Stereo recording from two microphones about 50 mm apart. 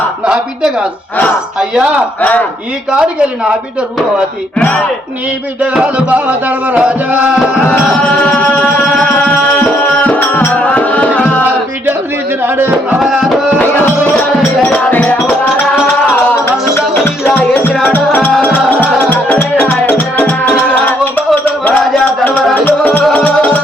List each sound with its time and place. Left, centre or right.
0.3 s speech: centre
2.9 s speech: centre
6.7 s music: right
8.4 s music: left
12.4 s speech: right
13.0 s music: centre
13.6 s music: left
17.2 s music: left
23.1 s music: left